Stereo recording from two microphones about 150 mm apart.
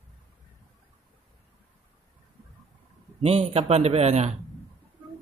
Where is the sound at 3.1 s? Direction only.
45° right (ahead or behind).